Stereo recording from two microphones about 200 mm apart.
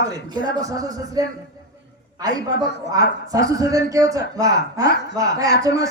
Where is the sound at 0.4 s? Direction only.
15° right (ahead or behind).